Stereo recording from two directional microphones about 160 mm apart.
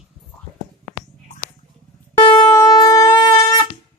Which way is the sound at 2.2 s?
35° left (ahead or behind).